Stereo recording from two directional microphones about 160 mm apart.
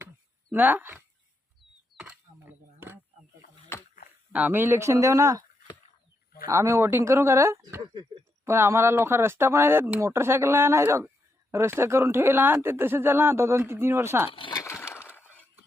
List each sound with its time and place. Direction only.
0.5 s speech: 10° right (ahead or behind)
4.3 s speech: 10° right (ahead or behind)
6.5 s speech: 20° right (ahead or behind)
14.3 s speech: 30° left (ahead or behind)
14.6 s breaking: 15° left (ahead or behind)